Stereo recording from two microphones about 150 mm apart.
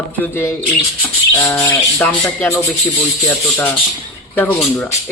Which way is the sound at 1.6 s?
20° left (ahead or behind).